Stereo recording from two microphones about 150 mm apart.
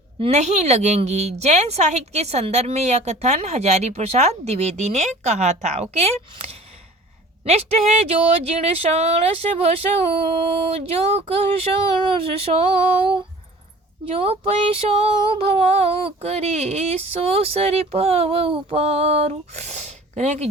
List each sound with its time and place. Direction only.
0.2 s a woman's voice: 50° right (ahead or behind)
14.1 s a woman's voice: 40° right (ahead or behind)